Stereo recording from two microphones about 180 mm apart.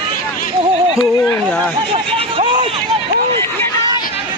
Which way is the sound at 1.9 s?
30° right (ahead or behind).